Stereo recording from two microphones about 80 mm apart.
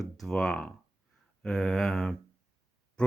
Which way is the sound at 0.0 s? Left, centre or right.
Centre.